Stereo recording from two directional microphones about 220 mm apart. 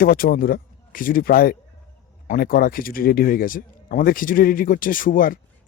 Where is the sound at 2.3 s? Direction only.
40° left (ahead or behind).